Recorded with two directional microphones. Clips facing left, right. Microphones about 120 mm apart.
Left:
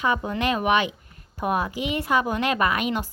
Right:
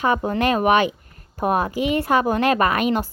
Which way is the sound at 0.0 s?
45° right (ahead or behind).